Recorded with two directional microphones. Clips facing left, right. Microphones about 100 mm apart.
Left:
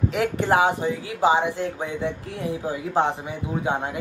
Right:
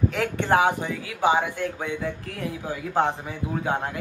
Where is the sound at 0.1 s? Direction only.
20° left (ahead or behind).